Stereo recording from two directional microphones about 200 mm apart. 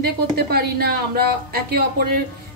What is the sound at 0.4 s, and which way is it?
A woman's voice, 50° right (ahead or behind).